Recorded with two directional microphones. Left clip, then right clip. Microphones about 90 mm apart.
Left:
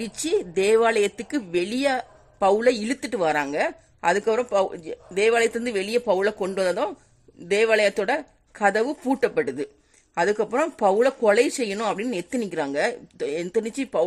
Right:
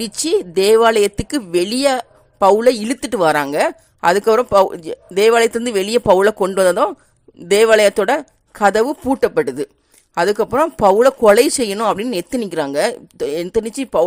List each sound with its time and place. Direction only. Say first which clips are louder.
0.0 s speech: right 7 dB; 40° right (ahead or behind)
2.4 s speech: right 8 dB; 50° right (ahead or behind)
4.5 s speech: right 10 dB; 60° right (ahead or behind)
8.2 s a sound: right 7 dB; 30° right (ahead or behind)
8.7 s speech: right 7 dB; 50° right (ahead or behind)
9.2 s speech: right 7 dB; 40° right (ahead or behind)
10.9 s speech: right 9 dB; 55° right (ahead or behind)
12.1 s speech: right 7 dB; 40° right (ahead or behind)
13.1 s speech: right 7 dB; 50° right (ahead or behind)
13.4 s speech: right 6 dB; 35° right (ahead or behind)